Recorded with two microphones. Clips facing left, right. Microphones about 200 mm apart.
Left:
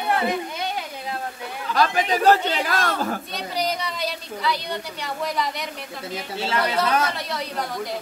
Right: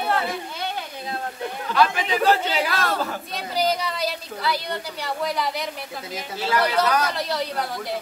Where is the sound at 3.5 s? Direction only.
Centre (ahead or behind).